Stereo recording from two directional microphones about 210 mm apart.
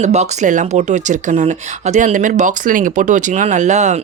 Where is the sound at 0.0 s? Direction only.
35° right (ahead or behind).